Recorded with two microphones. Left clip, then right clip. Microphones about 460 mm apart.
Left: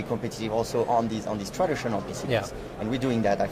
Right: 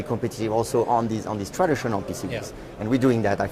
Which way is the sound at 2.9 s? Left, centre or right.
Right.